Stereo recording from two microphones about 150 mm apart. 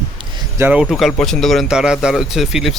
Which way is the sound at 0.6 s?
10° right (ahead or behind).